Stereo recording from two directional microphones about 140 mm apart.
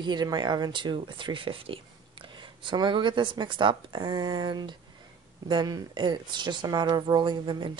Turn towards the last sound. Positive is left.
turn(degrees=-30)  # may be behind; listen again after turning